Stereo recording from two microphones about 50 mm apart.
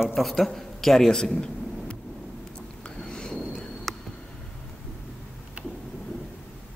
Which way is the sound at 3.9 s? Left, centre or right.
Centre.